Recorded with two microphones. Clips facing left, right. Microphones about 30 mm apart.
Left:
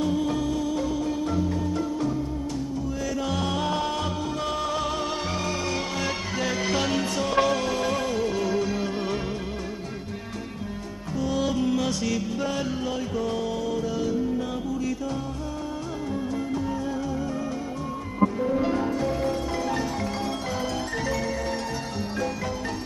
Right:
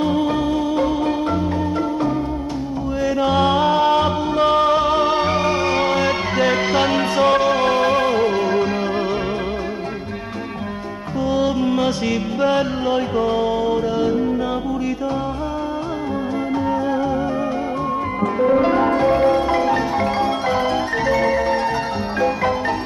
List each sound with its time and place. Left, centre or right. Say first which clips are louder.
0.0 s music: right 7 dB; right
3.2 s music: right 12 dB; right
7.3 s music: right 6 dB; right
7.6 s music: right 10 dB; right
11.2 s music: right 7 dB; right
18.4 s music: right 9 dB; right